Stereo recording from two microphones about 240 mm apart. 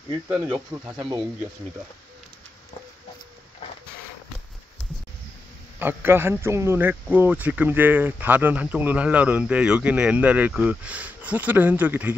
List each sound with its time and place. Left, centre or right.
0.3 s a man's voice: centre
5.8 s a man's voice: centre